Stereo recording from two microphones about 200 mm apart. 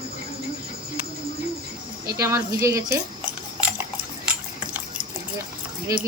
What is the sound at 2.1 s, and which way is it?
Speech, 15° right (ahead or behind).